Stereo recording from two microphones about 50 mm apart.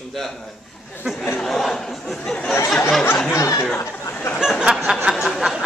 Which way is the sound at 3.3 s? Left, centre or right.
Left.